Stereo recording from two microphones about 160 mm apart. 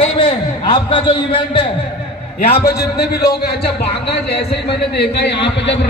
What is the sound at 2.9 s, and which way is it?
A man's voice, 90° left.